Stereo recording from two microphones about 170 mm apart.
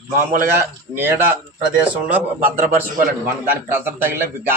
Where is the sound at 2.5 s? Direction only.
50° right (ahead or behind).